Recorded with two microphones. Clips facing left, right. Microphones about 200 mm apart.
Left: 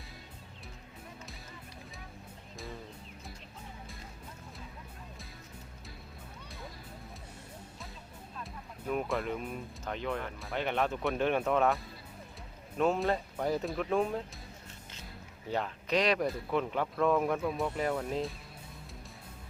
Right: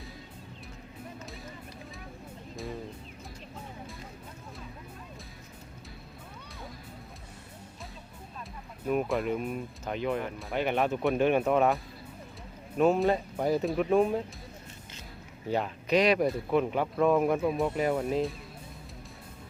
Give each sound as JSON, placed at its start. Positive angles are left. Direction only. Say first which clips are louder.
{"t": 8.9, "sound": "speech", "louder": "right 5 dB", "side_deg": -10}
{"t": 15.5, "sound": "speech", "louder": "right 5 dB", "side_deg": -10}
{"t": 17.7, "sound": "speech", "louder": "right 5 dB", "side_deg": -10}